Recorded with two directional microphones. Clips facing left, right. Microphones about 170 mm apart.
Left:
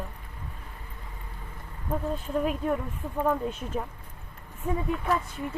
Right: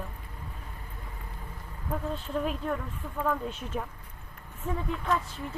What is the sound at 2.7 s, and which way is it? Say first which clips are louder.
Speech: left 4 dB; 20° left (ahead or behind).